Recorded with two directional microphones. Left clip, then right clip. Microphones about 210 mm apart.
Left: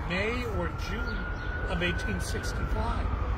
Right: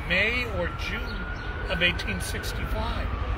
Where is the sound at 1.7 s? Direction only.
15° right (ahead or behind).